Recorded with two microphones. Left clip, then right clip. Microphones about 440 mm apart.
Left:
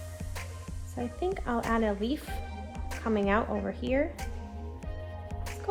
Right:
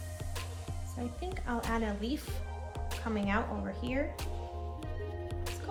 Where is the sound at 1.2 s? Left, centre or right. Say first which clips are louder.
Left 7 dB; centre.